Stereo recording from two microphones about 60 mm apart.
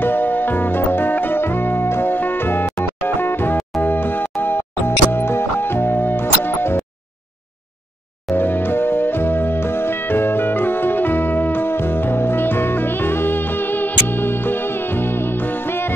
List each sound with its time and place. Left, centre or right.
0.0 s music: left
8.4 s music: left